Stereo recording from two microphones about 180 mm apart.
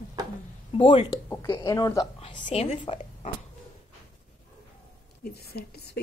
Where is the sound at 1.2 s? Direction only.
15° left (ahead or behind).